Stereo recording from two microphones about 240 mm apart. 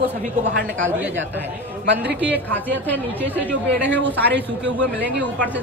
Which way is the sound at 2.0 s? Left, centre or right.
Centre.